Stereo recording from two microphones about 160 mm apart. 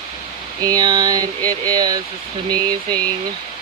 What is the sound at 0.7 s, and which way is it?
Speech, 25° right (ahead or behind).